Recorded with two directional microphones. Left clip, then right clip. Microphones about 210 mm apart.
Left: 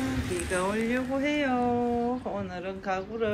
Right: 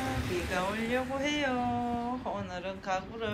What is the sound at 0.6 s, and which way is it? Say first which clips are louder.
Speech: left 3 dB; 5° right (ahead or behind).